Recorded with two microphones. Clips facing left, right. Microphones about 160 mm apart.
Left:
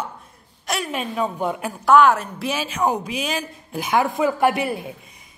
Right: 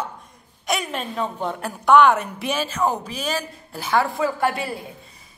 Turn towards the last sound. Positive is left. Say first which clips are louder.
# left 4 dB
turn(degrees=20)  # may be behind; listen again after turning